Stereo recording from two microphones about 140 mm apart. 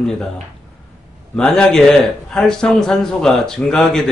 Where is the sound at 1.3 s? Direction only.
5° left (ahead or behind).